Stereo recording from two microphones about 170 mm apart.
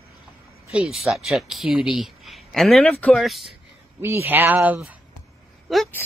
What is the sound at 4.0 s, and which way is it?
Speech, 15° right (ahead or behind).